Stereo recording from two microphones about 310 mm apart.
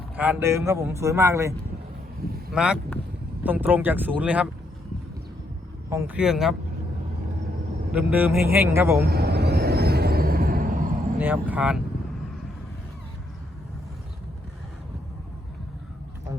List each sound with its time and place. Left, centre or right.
0.2 s speech: centre
5.9 s speech: centre
7.9 s speech: centre
9.0 s vehicle: right
11.2 s speech: centre